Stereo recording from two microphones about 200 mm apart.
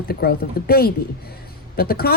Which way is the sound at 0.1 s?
50° left (ahead or behind).